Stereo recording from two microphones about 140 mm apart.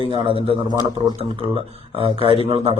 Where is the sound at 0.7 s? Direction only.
30° left (ahead or behind).